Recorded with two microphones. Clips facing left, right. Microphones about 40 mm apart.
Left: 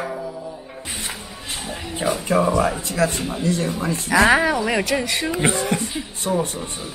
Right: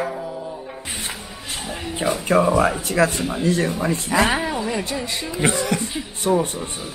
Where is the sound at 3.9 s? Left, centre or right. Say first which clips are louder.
Left 6 dB; left.